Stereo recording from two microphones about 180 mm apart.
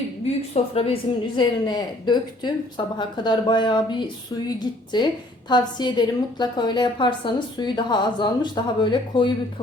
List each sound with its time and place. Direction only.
0.5 s a woman's voice: 35° left (ahead or behind)